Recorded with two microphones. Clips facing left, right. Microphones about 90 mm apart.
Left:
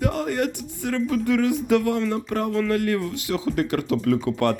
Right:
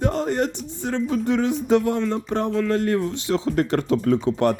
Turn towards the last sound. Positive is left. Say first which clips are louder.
# right 2 dB
turn(degrees=-25)  # may be behind; listen again after turning